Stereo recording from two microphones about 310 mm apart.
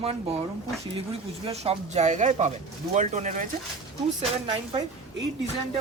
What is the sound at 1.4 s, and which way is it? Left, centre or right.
Speech, centre.